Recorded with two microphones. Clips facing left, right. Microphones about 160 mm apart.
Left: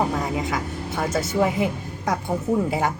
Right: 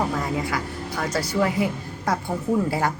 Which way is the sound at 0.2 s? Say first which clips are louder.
Left 1 dB; 20° left (ahead or behind).